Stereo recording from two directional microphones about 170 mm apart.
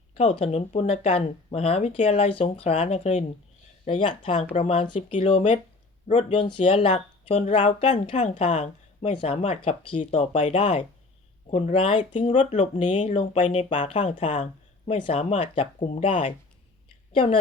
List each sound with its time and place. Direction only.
0.2 s speech: 35° left (ahead or behind)
10.0 s speech: 45° left (ahead or behind)
10.3 s speech: 35° left (ahead or behind)